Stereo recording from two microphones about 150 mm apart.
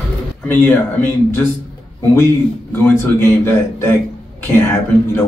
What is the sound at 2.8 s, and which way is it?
Speech, 15° left (ahead or behind).